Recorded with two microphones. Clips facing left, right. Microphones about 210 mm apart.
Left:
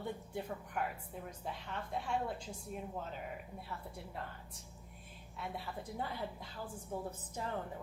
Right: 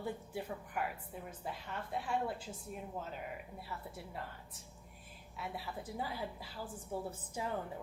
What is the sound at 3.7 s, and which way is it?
A woman's voice, centre (ahead or behind).